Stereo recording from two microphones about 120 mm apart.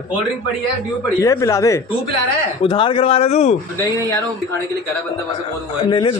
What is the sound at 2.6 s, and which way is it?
Speech, 45° left (ahead or behind).